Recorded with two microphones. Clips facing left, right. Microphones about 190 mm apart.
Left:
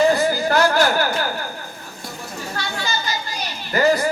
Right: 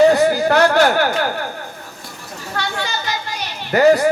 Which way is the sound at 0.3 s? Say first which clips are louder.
Right 4 dB; 60° right (ahead or behind).